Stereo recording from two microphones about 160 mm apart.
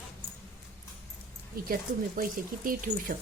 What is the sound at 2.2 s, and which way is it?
Speech, 60° right (ahead or behind).